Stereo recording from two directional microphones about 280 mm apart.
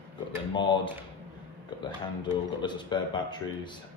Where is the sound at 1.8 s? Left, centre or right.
Centre.